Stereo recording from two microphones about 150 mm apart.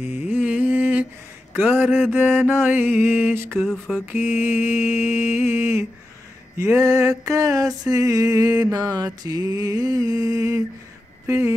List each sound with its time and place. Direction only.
0.0 s a sound: 15° right (ahead or behind)
1.5 s mantra: 10° right (ahead or behind)
6.6 s music: 20° right (ahead or behind)
11.2 s speech: 20° right (ahead or behind)